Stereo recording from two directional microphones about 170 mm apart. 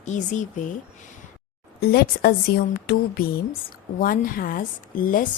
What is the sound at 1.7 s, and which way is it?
A woman's voice, 65° left (ahead or behind).